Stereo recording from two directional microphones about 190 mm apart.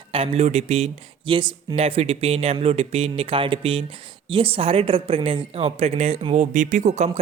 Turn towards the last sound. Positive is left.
turn(degrees=-35)  # may be behind; listen again after turning